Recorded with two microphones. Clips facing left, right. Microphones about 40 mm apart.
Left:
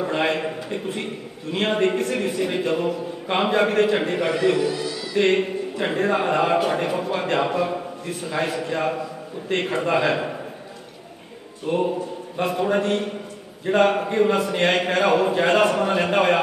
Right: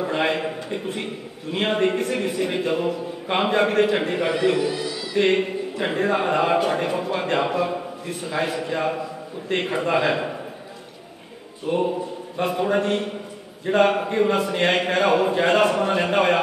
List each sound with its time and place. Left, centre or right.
0.0 s a man's voice: centre
11.6 s a man's voice: centre